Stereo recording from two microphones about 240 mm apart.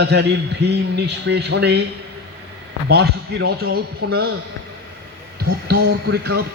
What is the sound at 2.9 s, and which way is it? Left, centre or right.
A man's voice, right.